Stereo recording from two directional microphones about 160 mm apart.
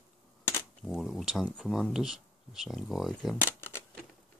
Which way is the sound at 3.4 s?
15° left (ahead or behind).